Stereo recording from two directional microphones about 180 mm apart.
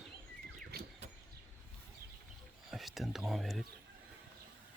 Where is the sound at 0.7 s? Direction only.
60° right (ahead or behind).